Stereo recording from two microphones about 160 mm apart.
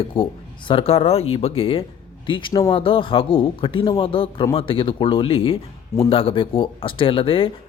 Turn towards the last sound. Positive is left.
turn(degrees=35)  # may be behind; listen again after turning